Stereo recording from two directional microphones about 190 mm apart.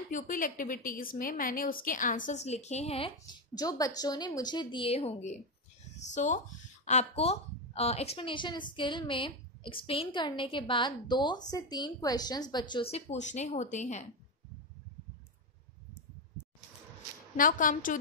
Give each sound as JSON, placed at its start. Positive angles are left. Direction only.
{"t": 0.1, "sound": "a woman's voice", "side_deg": 45}
{"t": 3.5, "sound": "speech", "side_deg": 20}
{"t": 12.9, "sound": "speech", "side_deg": 35}
{"t": 17.4, "sound": "a woman's voice", "side_deg": 45}